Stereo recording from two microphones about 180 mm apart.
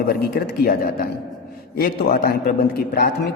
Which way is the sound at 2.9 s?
60° left (ahead or behind).